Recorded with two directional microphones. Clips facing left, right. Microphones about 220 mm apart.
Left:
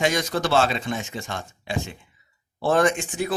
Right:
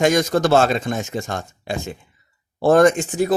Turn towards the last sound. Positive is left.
turn(degrees=-40)  # may be behind; listen again after turning